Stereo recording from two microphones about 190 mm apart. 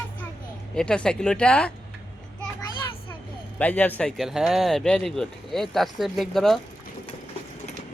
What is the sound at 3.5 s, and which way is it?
Speech, 10° left (ahead or behind).